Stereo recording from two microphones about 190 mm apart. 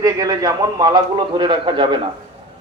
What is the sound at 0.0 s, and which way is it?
A man's voice, 20° right (ahead or behind).